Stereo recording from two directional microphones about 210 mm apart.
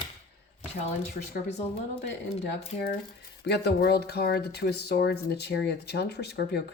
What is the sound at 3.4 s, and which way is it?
Speech, 50° left (ahead or behind).